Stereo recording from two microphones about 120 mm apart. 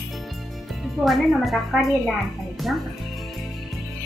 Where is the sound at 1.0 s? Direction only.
Centre (ahead or behind).